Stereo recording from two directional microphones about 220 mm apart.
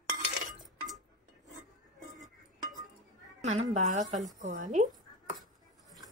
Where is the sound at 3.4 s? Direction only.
35° right (ahead or behind).